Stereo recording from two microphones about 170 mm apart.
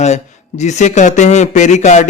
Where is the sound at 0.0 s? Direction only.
45° left (ahead or behind).